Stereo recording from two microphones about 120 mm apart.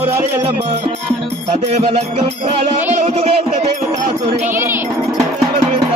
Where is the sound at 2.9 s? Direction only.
80° right.